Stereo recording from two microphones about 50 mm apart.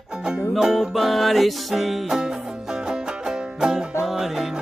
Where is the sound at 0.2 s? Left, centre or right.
Centre.